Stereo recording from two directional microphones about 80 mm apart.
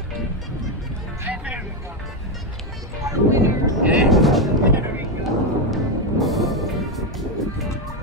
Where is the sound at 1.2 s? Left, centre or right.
Centre.